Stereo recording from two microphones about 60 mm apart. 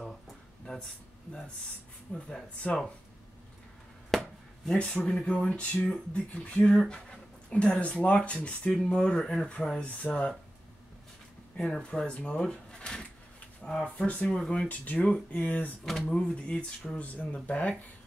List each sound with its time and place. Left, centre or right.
2.1 s speech: centre
4.1 s chopping: centre
4.7 s speech: centre
11.5 s speech: centre
12.1 s speech: left
13.6 s a sound: centre
13.9 s speech: left
15.8 s speech: centre
17.0 s speech: left